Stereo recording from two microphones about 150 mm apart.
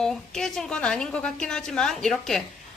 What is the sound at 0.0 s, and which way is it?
A woman's voice, 5° left (ahead or behind).